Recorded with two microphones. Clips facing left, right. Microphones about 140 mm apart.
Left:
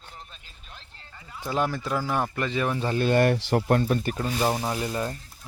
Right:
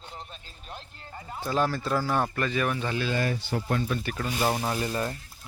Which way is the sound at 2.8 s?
35° left (ahead or behind).